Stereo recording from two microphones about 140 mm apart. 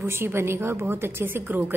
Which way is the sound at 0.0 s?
15° right (ahead or behind).